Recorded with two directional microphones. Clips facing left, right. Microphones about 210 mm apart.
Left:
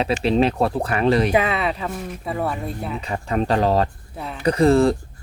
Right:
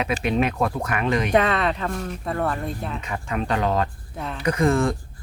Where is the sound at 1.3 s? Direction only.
5° left (ahead or behind).